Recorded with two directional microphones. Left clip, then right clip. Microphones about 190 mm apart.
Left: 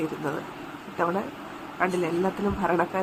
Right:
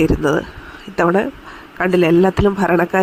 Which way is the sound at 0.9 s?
40° right (ahead or behind).